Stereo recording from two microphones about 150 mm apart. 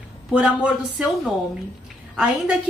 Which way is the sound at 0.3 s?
5° right (ahead or behind).